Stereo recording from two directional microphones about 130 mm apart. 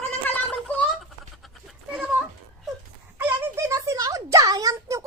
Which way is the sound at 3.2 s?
20° right (ahead or behind).